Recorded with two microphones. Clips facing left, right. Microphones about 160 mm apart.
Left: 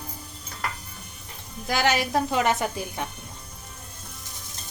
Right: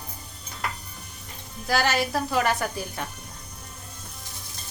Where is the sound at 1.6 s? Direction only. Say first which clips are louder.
Even; 15° left (ahead or behind).